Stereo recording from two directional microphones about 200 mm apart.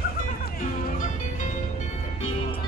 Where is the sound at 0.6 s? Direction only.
40° left (ahead or behind).